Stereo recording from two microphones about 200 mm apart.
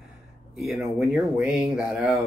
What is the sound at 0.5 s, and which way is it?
Speech, centre (ahead or behind).